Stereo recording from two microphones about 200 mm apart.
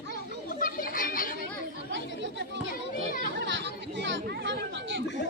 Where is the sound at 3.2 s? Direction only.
60° right (ahead or behind).